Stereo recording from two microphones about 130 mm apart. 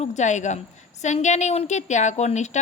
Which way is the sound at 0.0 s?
65° left (ahead or behind).